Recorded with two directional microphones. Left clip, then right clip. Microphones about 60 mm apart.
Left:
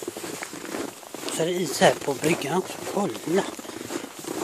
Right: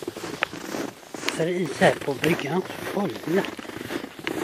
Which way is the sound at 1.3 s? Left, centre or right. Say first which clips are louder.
Left 2 dB; left.